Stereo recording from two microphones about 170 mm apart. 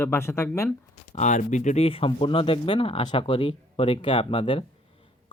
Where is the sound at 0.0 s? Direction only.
15° left (ahead or behind).